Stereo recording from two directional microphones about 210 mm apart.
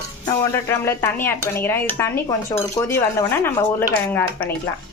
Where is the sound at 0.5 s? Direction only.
10° left (ahead or behind).